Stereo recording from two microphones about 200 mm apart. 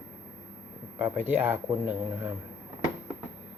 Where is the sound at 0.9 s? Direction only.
10° right (ahead or behind).